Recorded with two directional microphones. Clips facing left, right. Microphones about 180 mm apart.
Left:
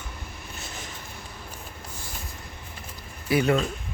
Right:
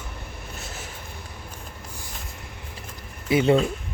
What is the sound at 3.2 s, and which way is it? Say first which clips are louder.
Speech: right 3 dB; 25° right (ahead or behind).